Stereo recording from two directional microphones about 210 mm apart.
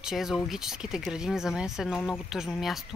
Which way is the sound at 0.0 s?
Centre (ahead or behind).